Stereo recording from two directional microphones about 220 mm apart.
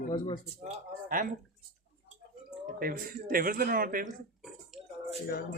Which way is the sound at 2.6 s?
40° right (ahead or behind).